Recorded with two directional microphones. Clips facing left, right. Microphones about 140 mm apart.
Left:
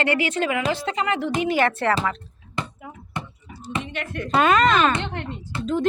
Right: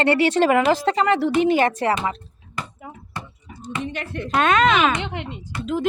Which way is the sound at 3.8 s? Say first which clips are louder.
Right 2 dB; 35° right (ahead or behind).